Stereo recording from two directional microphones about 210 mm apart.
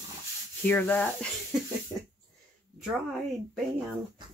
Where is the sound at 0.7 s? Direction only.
10° left (ahead or behind).